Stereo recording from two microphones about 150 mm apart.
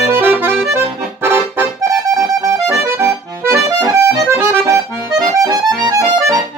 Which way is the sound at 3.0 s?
20° right (ahead or behind).